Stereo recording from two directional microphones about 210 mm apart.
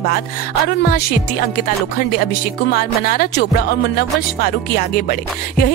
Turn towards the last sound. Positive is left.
turn(degrees=45)  # may be behind; listen again after turning